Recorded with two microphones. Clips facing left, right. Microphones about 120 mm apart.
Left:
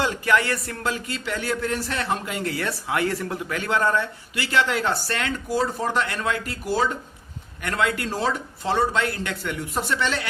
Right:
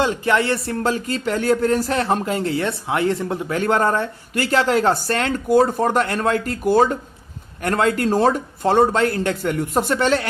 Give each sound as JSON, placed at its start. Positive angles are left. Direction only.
{"t": 0.0, "sound": "speech", "side_deg": -25}
{"t": 3.6, "sound": "speech", "side_deg": -45}
{"t": 5.5, "sound": "speech", "side_deg": -55}